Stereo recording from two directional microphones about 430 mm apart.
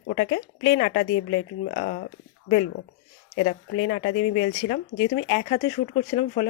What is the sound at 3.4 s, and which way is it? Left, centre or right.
Speech, centre.